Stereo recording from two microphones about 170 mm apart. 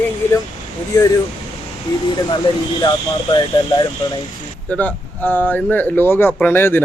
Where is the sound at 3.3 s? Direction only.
25° left (ahead or behind).